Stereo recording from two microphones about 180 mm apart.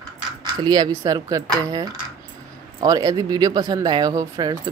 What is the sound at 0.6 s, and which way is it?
Speech, 20° right (ahead or behind).